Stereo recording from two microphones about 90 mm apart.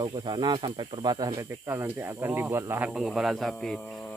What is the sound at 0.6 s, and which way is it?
Speech, 65° right (ahead or behind).